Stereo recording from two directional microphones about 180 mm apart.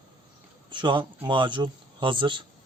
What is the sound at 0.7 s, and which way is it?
Speech, 25° right (ahead or behind).